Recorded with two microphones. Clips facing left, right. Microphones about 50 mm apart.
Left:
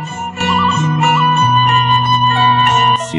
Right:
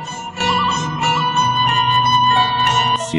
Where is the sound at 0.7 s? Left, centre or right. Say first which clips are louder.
Left 5 dB; left.